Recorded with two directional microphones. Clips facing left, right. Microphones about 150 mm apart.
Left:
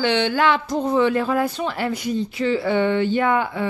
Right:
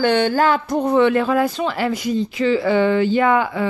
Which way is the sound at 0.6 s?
60° right (ahead or behind).